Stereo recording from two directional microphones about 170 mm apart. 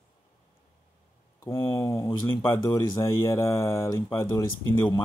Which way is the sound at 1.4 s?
15° left (ahead or behind).